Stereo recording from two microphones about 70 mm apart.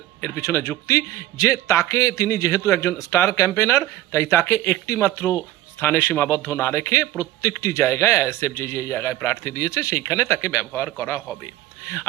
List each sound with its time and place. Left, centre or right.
0.3 s a man's voice: left